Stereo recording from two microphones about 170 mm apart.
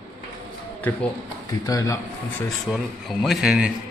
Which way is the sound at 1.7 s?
20° left (ahead or behind).